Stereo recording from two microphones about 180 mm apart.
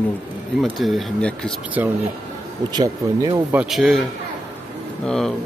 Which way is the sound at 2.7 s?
20° right (ahead or behind).